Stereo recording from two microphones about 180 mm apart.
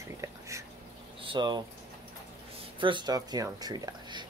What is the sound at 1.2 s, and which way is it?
Speech, 25° right (ahead or behind).